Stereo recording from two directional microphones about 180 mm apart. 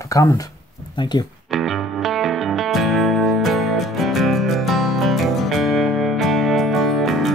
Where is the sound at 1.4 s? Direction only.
Centre (ahead or behind).